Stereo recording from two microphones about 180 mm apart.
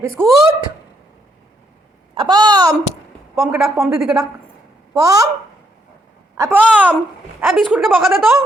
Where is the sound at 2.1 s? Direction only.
25° right (ahead or behind).